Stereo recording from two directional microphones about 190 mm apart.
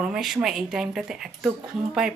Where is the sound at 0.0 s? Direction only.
Centre (ahead or behind).